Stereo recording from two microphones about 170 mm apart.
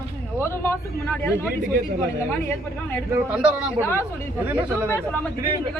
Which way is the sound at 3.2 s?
5° right (ahead or behind).